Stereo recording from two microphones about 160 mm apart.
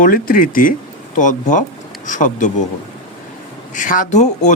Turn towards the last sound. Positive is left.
turn(degrees=50)  # may be behind; listen again after turning